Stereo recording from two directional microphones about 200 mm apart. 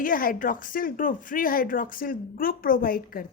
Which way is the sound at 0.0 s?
45° left (ahead or behind).